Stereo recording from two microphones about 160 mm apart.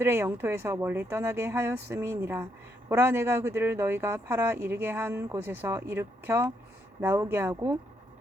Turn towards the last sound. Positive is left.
turn(degrees=-20)  # may be behind; listen again after turning